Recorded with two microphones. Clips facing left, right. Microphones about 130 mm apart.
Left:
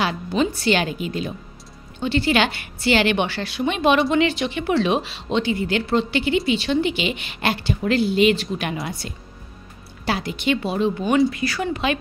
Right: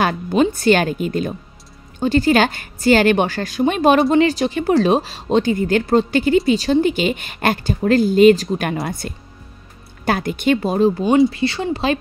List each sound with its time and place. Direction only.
0.0 s a woman's voice: 50° right (ahead or behind)
11.1 s speech: 25° right (ahead or behind)